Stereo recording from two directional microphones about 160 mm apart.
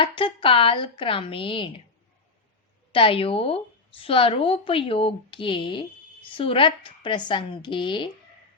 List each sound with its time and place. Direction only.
0.0 s a woman's voice: 35° left (ahead or behind)
2.9 s a woman's voice: 35° left (ahead or behind)